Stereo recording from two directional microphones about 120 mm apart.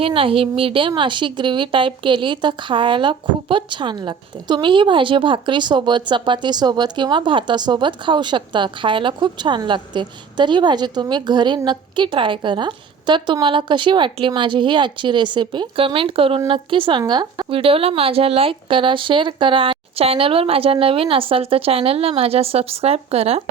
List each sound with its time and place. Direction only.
0.0 s a woman's voice: 50° right (ahead or behind)